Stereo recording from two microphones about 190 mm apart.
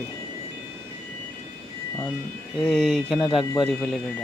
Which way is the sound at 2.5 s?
Centre (ahead or behind).